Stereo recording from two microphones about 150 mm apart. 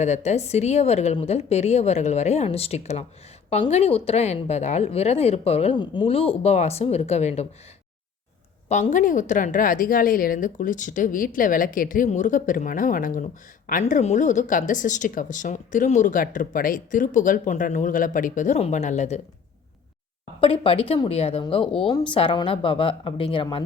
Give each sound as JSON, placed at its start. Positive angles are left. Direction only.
{"t": 0.0, "sound": "a woman's voice", "side_deg": 50}
{"t": 5.7, "sound": "a woman's voice", "side_deg": 30}
{"t": 8.7, "sound": "speech", "side_deg": 55}
{"t": 20.4, "sound": "a woman's voice", "side_deg": 35}